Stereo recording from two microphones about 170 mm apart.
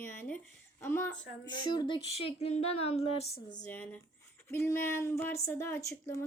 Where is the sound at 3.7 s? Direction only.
10° left (ahead or behind).